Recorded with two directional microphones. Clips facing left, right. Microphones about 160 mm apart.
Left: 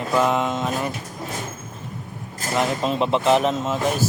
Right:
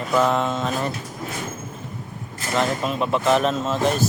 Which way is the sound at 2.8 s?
25° left (ahead or behind).